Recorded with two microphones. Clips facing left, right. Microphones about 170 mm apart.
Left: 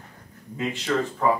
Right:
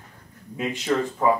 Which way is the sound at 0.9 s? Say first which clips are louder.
Right 2 dB; 10° right (ahead or behind).